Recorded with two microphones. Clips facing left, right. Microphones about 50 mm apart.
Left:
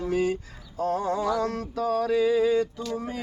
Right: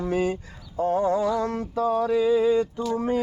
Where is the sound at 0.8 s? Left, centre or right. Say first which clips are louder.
Right 4 dB; right.